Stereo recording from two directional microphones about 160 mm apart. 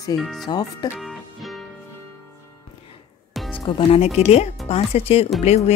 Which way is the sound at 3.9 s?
40° left (ahead or behind).